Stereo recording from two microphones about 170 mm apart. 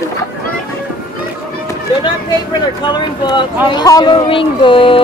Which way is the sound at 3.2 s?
25° left (ahead or behind).